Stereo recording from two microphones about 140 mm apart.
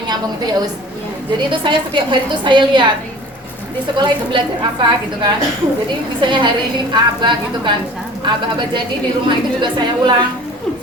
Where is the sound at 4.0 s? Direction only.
30° right (ahead or behind).